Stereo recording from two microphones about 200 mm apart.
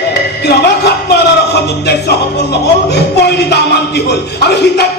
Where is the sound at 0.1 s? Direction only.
55° left (ahead or behind).